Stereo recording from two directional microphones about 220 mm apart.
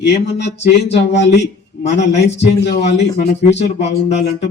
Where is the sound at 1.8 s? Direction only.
30° left (ahead or behind).